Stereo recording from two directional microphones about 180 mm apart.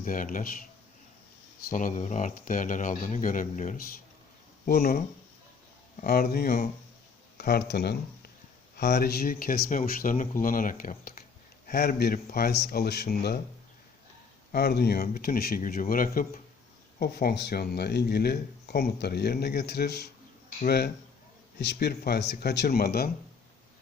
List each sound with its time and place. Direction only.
0.0 s speech: 50° left (ahead or behind)
1.7 s speech: 45° left (ahead or behind)
4.6 s speech: 55° left (ahead or behind)
6.0 s speech: 55° left (ahead or behind)
14.5 s speech: 65° left (ahead or behind)